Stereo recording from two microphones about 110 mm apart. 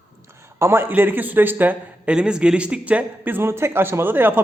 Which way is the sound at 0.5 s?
25° right (ahead or behind).